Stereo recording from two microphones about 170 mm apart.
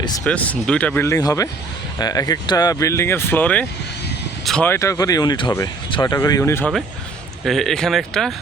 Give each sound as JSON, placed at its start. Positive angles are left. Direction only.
{"t": 0.3, "sound": "speech", "side_deg": 10}
{"t": 4.7, "sound": "speech", "side_deg": 20}
{"t": 7.4, "sound": "speech", "side_deg": 0}